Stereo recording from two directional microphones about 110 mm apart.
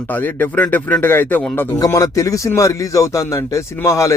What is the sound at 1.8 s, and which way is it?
Speech, 30° left (ahead or behind).